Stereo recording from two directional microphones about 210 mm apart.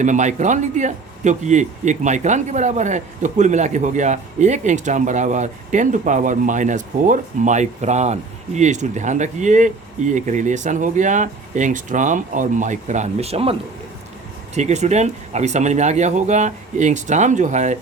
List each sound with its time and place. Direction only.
0.0 s a man's voice: 35° right (ahead or behind)